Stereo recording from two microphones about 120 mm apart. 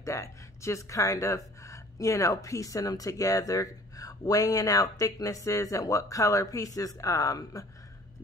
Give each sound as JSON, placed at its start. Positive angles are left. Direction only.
{"t": 0.0, "sound": "speech", "side_deg": 25}